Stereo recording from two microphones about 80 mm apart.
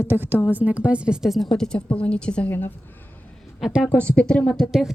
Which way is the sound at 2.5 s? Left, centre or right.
Left.